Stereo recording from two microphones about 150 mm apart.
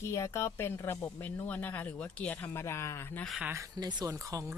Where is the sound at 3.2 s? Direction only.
Centre (ahead or behind).